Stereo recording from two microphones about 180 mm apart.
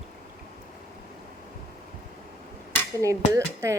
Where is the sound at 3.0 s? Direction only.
15° right (ahead or behind).